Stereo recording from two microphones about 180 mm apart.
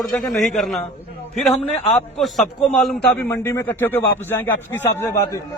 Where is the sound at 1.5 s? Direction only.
35° left (ahead or behind).